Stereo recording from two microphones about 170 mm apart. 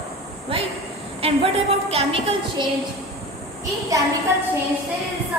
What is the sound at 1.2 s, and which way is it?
A woman's voice, 35° right (ahead or behind).